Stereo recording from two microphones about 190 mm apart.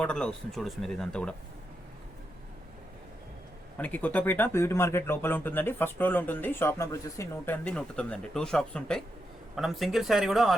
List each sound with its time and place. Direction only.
0.0 s speech: 5° left (ahead or behind)
3.8 s speech: 10° left (ahead or behind)